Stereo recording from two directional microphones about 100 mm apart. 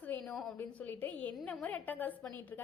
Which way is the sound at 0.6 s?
20° left (ahead or behind).